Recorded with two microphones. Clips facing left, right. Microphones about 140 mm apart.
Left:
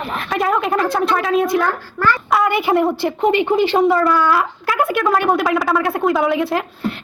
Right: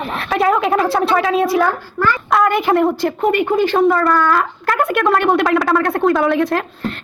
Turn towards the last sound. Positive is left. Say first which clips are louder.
# right 1 dB
turn(degrees=10)  # may be behind; listen again after turning